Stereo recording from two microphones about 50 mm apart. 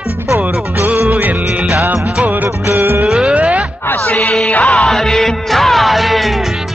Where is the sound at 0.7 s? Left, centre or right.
Right.